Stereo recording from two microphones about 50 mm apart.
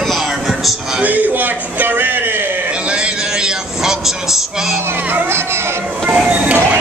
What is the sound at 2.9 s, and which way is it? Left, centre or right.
A man's voice, centre.